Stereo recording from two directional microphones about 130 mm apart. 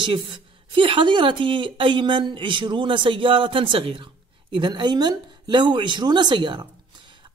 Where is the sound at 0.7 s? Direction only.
40° right (ahead or behind).